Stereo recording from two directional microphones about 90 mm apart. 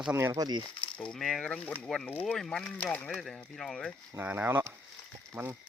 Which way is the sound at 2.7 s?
20° left (ahead or behind).